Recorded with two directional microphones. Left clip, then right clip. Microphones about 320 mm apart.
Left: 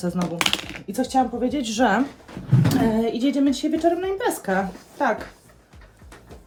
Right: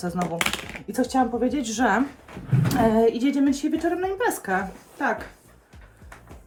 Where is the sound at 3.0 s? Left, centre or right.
Centre.